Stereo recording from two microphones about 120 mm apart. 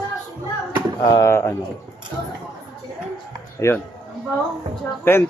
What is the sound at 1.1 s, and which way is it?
Speech, 25° left (ahead or behind).